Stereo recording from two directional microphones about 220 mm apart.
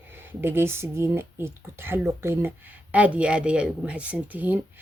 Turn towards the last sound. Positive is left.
turn(degrees=-10)  # may be behind; listen again after turning